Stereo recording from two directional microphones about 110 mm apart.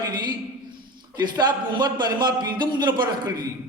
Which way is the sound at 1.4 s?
40° right (ahead or behind).